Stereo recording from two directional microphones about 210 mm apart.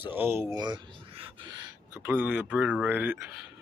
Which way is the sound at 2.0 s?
10° right (ahead or behind).